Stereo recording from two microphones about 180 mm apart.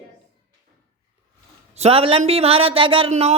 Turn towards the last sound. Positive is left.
turn(degrees=-35)  # may be behind; listen again after turning